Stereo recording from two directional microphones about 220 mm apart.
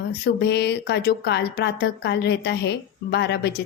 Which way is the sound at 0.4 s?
50° left (ahead or behind).